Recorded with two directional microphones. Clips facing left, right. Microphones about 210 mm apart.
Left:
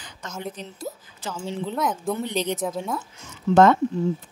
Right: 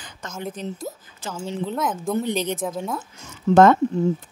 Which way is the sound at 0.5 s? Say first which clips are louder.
Right 3 dB; 50° right (ahead or behind).